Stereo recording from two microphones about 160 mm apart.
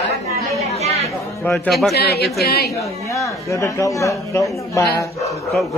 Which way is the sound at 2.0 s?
90° left.